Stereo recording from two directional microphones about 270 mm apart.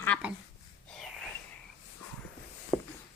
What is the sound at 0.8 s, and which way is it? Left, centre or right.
Wheeze, centre.